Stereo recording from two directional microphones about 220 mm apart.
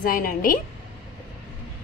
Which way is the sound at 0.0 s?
40° left (ahead or behind).